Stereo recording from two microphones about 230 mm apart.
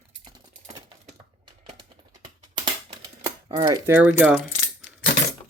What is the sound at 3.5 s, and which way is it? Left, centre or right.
Speech, right.